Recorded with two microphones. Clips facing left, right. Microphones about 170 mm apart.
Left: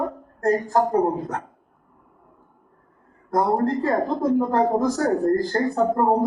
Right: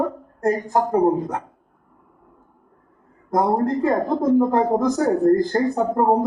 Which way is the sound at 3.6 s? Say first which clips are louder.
Right 2 dB; 20° right (ahead or behind).